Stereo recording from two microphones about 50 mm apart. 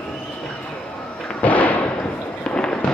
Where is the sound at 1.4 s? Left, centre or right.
Left.